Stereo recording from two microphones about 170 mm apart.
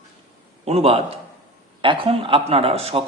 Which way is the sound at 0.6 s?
35° right (ahead or behind).